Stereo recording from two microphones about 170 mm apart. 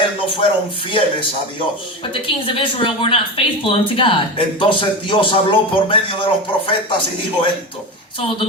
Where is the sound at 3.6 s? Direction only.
30° left (ahead or behind).